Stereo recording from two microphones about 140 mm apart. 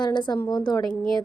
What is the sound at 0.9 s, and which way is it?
Speech, 5° left (ahead or behind).